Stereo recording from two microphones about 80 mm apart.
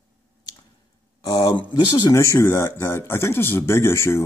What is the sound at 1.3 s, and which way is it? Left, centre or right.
Speech, left.